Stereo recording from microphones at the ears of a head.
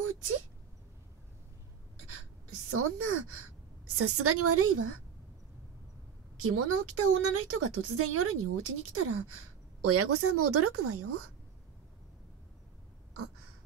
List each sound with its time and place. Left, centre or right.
0.0 s a sound: right
2.0 s speech: right
6.3 s a woman's voice: right